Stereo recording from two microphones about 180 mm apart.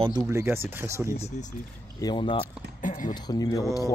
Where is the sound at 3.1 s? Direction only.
20° left (ahead or behind).